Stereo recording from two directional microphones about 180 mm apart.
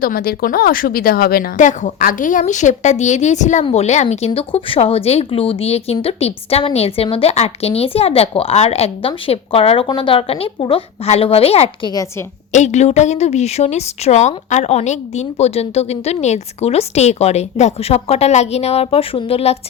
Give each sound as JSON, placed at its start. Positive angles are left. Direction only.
{"t": 0.0, "sound": "a woman's voice", "side_deg": 55}